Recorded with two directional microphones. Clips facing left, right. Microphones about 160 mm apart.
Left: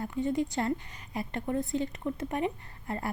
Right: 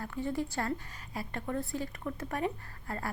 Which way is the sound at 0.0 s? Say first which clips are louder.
Left 5 dB; 20° left (ahead or behind).